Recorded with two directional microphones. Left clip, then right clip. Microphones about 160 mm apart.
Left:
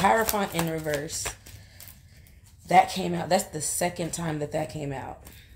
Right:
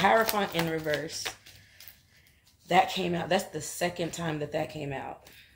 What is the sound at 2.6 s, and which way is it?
Speech, 15° left (ahead or behind).